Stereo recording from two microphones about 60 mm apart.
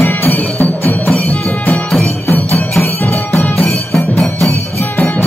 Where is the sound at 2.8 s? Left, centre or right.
Left.